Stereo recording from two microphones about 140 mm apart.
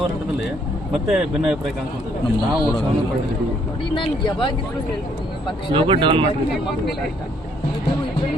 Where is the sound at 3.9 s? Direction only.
35° left (ahead or behind).